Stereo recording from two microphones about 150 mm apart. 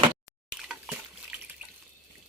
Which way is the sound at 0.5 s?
5° right (ahead or behind).